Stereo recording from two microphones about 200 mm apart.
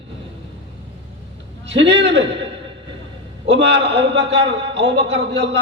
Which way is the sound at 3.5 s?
65° right (ahead or behind).